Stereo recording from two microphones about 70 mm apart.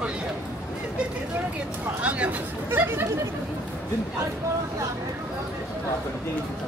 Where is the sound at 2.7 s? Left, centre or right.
Right.